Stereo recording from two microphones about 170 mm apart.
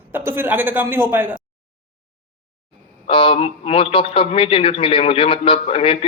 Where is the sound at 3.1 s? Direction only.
30° left (ahead or behind).